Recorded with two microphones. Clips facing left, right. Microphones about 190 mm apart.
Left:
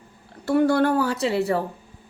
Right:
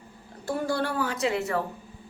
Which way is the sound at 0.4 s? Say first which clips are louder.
Left 9 dB; 65° left (ahead or behind).